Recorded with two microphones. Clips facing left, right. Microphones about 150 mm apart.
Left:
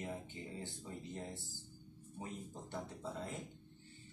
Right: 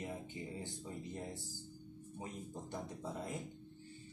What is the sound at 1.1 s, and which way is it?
Speech, 15° right (ahead or behind).